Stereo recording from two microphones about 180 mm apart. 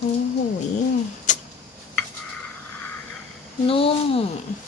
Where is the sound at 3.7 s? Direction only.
30° left (ahead or behind).